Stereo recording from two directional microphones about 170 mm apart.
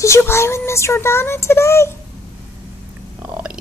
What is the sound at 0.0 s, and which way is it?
Speech, 15° left (ahead or behind).